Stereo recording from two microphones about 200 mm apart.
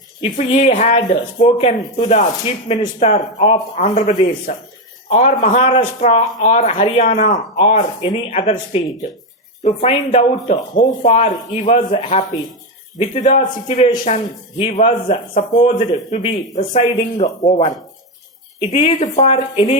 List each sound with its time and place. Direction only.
0.2 s a man's voice: 35° left (ahead or behind)
5.5 s a man's voice: 30° left (ahead or behind)